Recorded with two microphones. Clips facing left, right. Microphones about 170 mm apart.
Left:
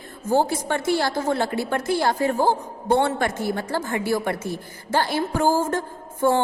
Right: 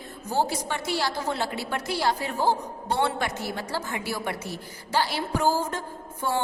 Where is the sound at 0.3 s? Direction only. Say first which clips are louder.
Left 6 dB; 50° left (ahead or behind).